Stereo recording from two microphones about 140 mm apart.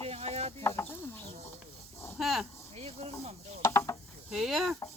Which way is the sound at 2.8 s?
45° right (ahead or behind).